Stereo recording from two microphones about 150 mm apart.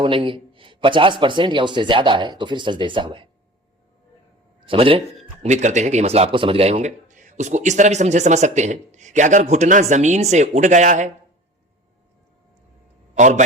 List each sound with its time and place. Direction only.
0.0 s a man's voice: 35° right (ahead or behind)
4.6 s speech: 35° right (ahead or behind); by 11.1 s 55° right (ahead or behind)
13.1 s a man's voice: 55° right (ahead or behind)